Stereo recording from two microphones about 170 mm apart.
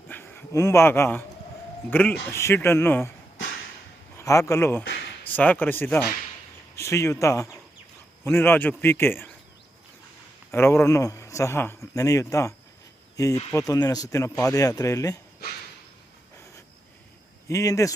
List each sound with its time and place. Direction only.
0.1 s a man's voice: 10° left (ahead or behind)
4.2 s a man's voice: 15° left (ahead or behind)
10.5 s a man's voice: 15° left (ahead or behind)
17.5 s speech: 20° left (ahead or behind)